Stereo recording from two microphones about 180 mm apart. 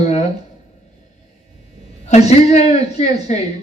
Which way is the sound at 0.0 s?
40° left (ahead or behind).